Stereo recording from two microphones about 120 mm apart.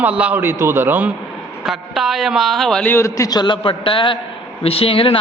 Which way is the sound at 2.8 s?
20° left (ahead or behind).